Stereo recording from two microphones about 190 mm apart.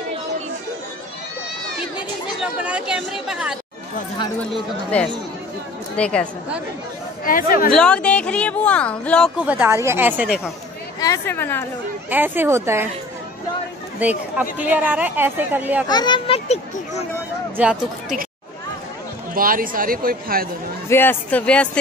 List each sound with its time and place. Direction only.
2.3 s speech: 5° right (ahead or behind)
7.2 s speech: 50° left (ahead or behind)
7.7 s speech: 5° left (ahead or behind)
9.4 s speech: 10° right (ahead or behind)
11.0 s speech: 15° left (ahead or behind)
12.1 s speech: 10° right (ahead or behind)
13.9 s speech: 10° right (ahead or behind)
15.9 s a child's voice: 25° left (ahead or behind)
17.6 s speech: 5° right (ahead or behind)
19.3 s speech: 50° right (ahead or behind)
20.9 s speech: 10° left (ahead or behind)